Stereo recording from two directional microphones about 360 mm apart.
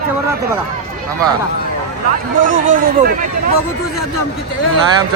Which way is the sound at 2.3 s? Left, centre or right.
Right.